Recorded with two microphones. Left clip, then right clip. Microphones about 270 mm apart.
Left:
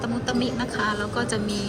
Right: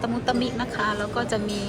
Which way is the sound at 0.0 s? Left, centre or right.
Centre.